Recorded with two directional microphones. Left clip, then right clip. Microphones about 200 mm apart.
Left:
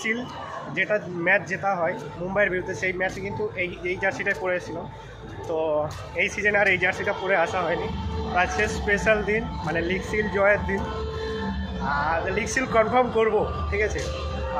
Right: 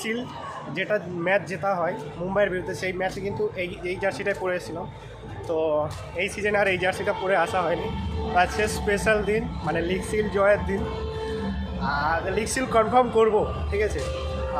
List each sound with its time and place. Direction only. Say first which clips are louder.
0.7 s a man's voice: left 2 dB; 15° right (ahead or behind)
11.8 s a man's voice: even; 15° right (ahead or behind)